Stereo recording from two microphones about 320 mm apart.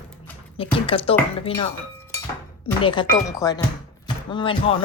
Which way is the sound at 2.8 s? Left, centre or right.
Centre.